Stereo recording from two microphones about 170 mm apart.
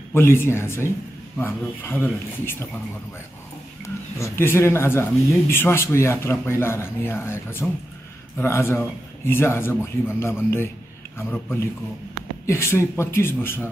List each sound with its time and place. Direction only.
0.1 s a man's voice: 15° left (ahead or behind)
3.8 s a man's voice: 15° left (ahead or behind)